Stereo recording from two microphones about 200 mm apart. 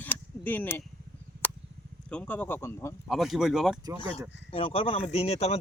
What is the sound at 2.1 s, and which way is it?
Speech, 5° left (ahead or behind).